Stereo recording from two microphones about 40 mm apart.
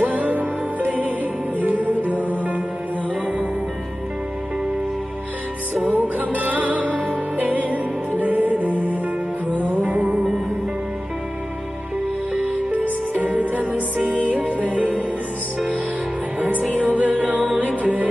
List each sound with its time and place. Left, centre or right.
0.0 s music: right
1.6 s music: right
5.8 s music: right
12.7 s music: right
16.3 s music: right